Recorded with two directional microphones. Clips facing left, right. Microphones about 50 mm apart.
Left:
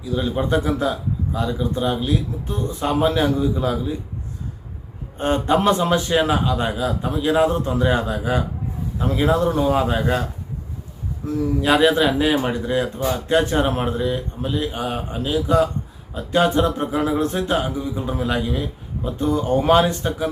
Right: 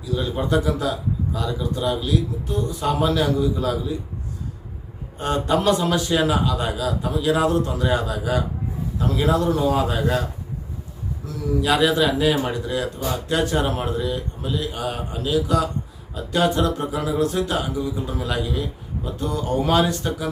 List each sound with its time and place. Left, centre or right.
0.0 s speech: centre
0.4 s speech: left
5.1 s speech: left
11.3 s speech: left